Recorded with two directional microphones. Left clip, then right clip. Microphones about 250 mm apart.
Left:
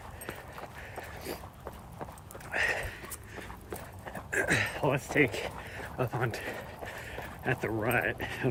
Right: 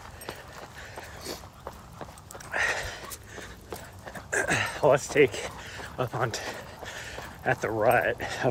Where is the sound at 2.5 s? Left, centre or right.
Centre.